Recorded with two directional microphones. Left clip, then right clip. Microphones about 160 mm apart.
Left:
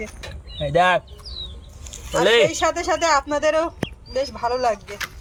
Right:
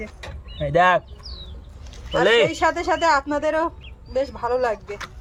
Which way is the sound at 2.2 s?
15° left (ahead or behind).